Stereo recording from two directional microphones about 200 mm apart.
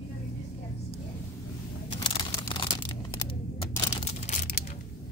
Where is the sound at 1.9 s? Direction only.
25° left (ahead or behind).